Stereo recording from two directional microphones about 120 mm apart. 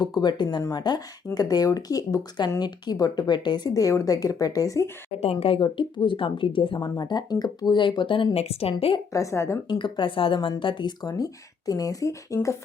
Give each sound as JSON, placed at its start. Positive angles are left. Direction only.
{"t": 0.0, "sound": "speech", "side_deg": 35}
{"t": 5.2, "sound": "speech", "side_deg": 55}
{"t": 6.7, "sound": "speech", "side_deg": 30}
{"t": 9.1, "sound": "a woman's voice", "side_deg": 25}
{"t": 9.6, "sound": "speech", "side_deg": 40}